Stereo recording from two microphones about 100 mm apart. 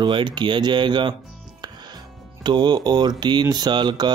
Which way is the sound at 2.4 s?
45° right (ahead or behind).